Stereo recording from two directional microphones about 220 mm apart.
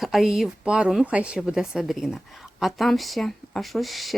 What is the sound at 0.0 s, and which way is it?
Speech, centre (ahead or behind).